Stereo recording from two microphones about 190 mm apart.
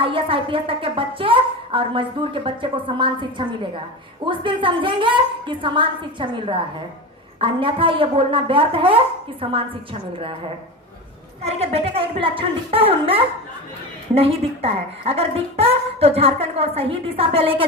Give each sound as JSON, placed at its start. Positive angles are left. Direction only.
{"t": 0.0, "sound": "a woman's voice", "side_deg": -30}
{"t": 11.4, "sound": "a woman's voice", "side_deg": -30}